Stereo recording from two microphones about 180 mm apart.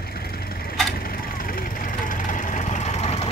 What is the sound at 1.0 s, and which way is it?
Vehicle, 55° left (ahead or behind).